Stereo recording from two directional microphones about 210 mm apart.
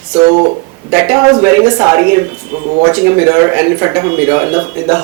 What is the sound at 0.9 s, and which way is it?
A man's voice, 15° right (ahead or behind).